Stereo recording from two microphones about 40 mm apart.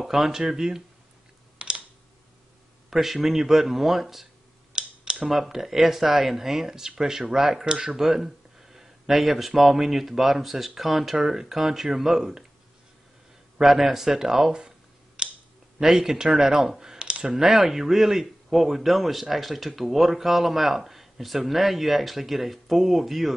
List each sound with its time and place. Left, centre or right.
0.0 s speech: centre
1.6 s computer keyboard: right
2.9 s speech: centre
4.7 s a sound: right
5.1 s a man's voice: centre
13.6 s speech: centre
15.2 s a sound: right
16.0 s speech: centre
17.0 s a sound: right
17.4 s a man's voice: centre